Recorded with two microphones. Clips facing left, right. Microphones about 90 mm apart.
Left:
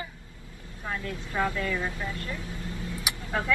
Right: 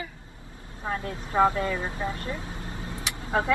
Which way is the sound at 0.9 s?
35° right (ahead or behind).